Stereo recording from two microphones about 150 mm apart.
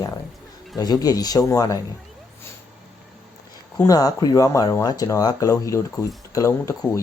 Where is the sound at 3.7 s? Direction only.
25° left (ahead or behind).